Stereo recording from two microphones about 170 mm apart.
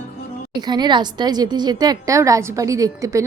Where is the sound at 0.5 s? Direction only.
25° right (ahead or behind).